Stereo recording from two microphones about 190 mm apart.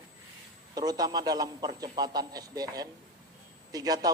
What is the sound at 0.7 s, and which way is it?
A man's voice, 20° right (ahead or behind).